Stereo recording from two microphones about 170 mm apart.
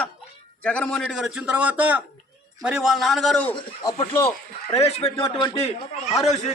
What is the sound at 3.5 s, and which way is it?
Speech, 25° left (ahead or behind).